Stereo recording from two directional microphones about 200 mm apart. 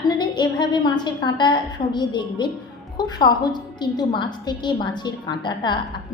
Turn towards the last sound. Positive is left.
turn(degrees=20)  # may be behind; listen again after turning